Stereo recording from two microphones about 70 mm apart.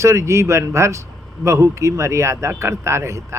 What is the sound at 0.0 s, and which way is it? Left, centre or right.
A man's voice, right.